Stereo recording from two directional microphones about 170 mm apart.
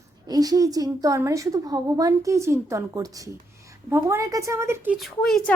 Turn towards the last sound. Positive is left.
turn(degrees=0)  # may be behind; listen again after turning